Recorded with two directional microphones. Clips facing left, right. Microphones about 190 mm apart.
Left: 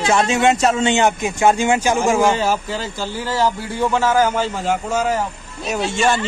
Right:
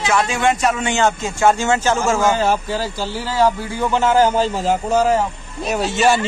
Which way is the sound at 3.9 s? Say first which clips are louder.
Right 3 dB; 25° right (ahead or behind).